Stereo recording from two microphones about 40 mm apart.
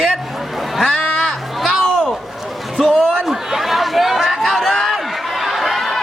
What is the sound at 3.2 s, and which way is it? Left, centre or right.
Chatter, centre.